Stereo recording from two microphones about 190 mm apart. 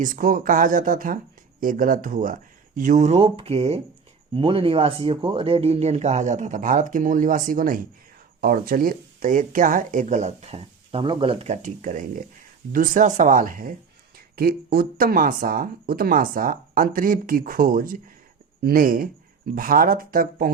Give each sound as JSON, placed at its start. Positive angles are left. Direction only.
{"t": 0.0, "sound": "speech", "side_deg": -45}